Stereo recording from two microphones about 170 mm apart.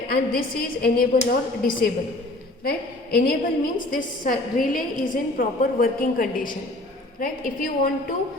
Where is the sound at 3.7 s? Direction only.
50° left (ahead or behind).